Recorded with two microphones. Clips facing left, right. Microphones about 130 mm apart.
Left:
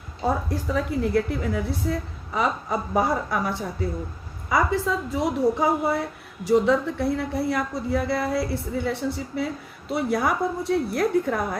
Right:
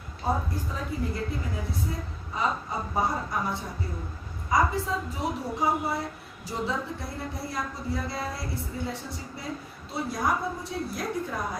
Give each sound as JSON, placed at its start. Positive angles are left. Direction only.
{"t": 0.5, "sound": "a woman's voice", "side_deg": 85}
{"t": 6.7, "sound": "a woman's voice", "side_deg": 70}